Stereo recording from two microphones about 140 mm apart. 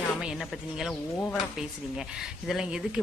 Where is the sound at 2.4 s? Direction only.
5° right (ahead or behind).